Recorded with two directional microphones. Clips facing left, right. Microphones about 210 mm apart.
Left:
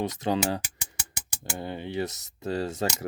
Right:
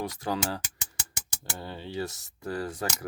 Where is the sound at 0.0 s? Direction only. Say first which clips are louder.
Left 4 dB; 20° left (ahead or behind).